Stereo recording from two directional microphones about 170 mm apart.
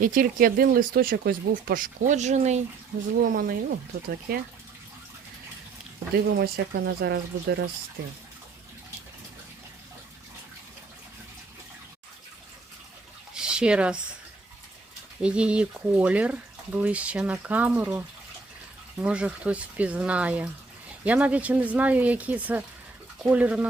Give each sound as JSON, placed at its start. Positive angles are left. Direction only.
{"t": 0.0, "sound": "speech", "side_deg": -55}
{"t": 3.3, "sound": "speech", "side_deg": -60}
{"t": 6.2, "sound": "speech", "side_deg": -85}
{"t": 13.3, "sound": "a sound", "side_deg": -5}
{"t": 15.2, "sound": "speech", "side_deg": -5}